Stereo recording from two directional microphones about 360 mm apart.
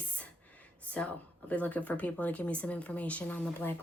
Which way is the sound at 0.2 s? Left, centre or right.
Centre.